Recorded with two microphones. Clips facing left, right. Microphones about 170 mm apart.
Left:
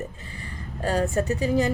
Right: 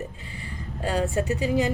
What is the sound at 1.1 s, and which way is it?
Speech, 40° left (ahead or behind).